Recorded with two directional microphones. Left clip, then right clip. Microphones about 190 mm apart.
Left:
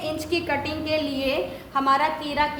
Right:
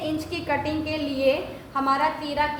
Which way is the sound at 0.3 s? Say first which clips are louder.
Left 3 dB; 25° left (ahead or behind).